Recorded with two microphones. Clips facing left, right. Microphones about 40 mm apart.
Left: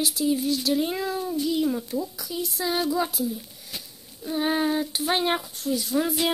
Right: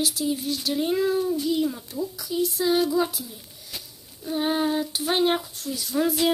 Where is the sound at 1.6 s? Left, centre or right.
Centre.